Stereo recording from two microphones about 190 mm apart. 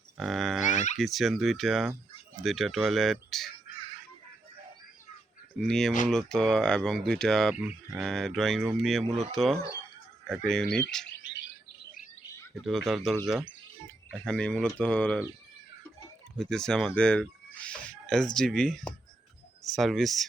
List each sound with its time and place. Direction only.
0.2 s music: centre (ahead or behind)
0.7 s music: 40° left (ahead or behind)
0.9 s speech: centre (ahead or behind)
5.5 s speech: centre (ahead or behind)
11.0 s bird: 70° left (ahead or behind)
12.6 s speech: centre (ahead or behind)
16.4 s speech: 5° left (ahead or behind)